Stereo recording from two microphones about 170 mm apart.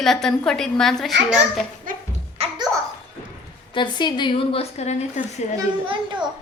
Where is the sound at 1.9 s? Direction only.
55° right (ahead or behind).